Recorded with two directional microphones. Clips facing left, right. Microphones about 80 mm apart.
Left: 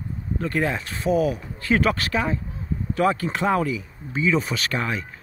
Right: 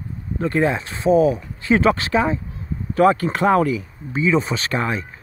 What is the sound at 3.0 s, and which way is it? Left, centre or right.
Speech, right.